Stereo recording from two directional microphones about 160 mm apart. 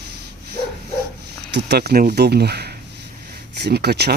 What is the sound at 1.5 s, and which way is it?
Speech, 90° right.